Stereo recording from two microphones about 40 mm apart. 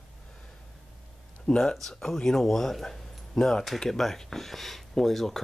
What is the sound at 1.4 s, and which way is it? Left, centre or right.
Speech, centre.